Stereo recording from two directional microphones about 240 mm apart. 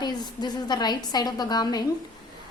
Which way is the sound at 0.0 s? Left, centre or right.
Centre.